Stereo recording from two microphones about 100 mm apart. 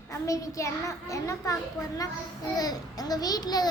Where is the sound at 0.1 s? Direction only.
30° left (ahead or behind).